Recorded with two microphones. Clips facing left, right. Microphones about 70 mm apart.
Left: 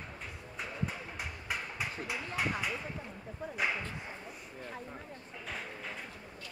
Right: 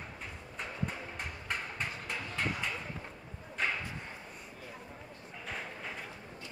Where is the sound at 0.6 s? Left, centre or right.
Centre.